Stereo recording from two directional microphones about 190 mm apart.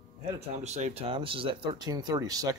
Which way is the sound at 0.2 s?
35° right (ahead or behind).